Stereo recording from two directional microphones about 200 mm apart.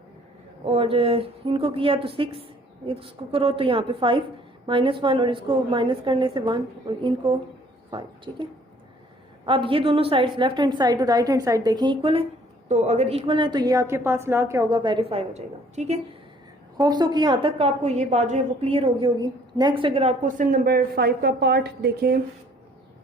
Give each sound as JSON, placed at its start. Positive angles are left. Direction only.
{"t": 0.6, "sound": "a woman's voice", "side_deg": -30}
{"t": 9.5, "sound": "a woman's voice", "side_deg": -25}
{"t": 12.6, "sound": "a woman's voice", "side_deg": -35}
{"t": 16.8, "sound": "a woman's voice", "side_deg": -20}